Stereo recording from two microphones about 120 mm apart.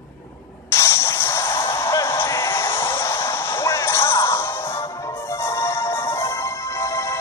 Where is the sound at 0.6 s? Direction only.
25° left (ahead or behind).